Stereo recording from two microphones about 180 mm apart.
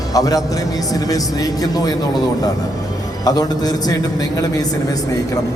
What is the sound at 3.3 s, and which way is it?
A man's voice, 20° left (ahead or behind).